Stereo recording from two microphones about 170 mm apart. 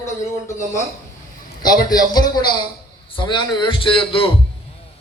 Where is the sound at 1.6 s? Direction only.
25° left (ahead or behind).